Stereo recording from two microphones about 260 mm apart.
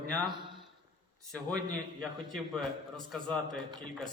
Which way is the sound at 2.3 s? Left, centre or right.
Centre.